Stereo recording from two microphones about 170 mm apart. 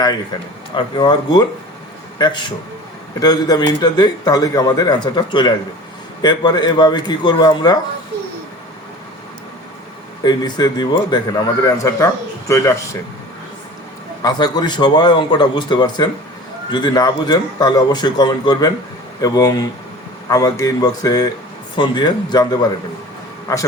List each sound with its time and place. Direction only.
0.8 s a man's voice: 25° left (ahead or behind)
10.2 s a man's voice: 25° left (ahead or behind)
14.2 s a man's voice: 25° left (ahead or behind)